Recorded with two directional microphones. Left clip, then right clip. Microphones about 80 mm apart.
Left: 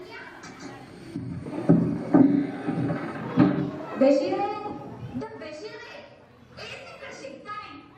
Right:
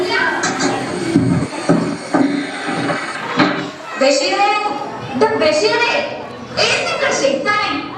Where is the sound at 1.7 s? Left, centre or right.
Right.